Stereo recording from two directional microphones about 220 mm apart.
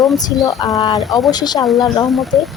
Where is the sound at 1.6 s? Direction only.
Centre (ahead or behind).